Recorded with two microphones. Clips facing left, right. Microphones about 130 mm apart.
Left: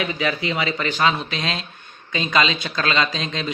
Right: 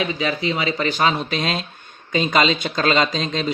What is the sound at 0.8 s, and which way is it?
Speech, 40° right (ahead or behind).